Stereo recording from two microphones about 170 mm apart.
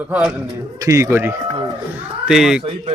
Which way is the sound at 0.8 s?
20° right (ahead or behind).